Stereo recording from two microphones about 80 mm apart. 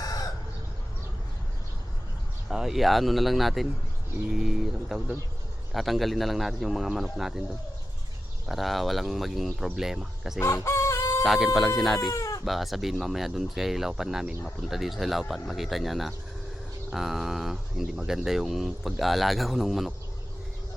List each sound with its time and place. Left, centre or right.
0.0 s chicken: left
2.5 s speech: centre
8.4 s speech: centre
10.4 s chicken: left
11.2 s speech: centre
12.1 s chicken: left
12.5 s speech: centre